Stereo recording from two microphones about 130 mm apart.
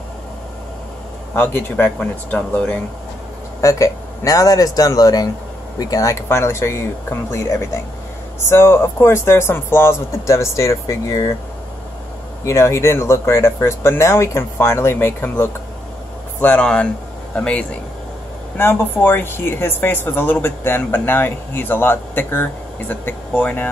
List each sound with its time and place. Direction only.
1.3 s speech: 15° left (ahead or behind)
3.6 s speech: 25° left (ahead or behind)
12.4 s speech: 20° left (ahead or behind)